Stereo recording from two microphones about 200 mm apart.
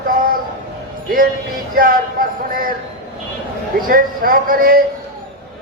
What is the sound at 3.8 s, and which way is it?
Speech, 45° right (ahead or behind).